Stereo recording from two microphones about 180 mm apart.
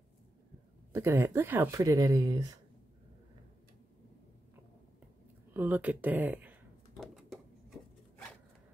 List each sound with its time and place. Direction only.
0.9 s speech: 15° right (ahead or behind)
5.5 s speech: 10° right (ahead or behind)
7.0 s a sound: centre (ahead or behind)